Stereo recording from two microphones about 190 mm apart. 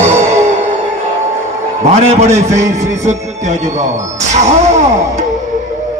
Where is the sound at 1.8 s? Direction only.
35° right (ahead or behind).